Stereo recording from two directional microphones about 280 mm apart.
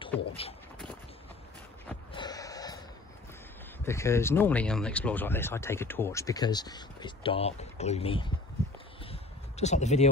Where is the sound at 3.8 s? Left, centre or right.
Centre.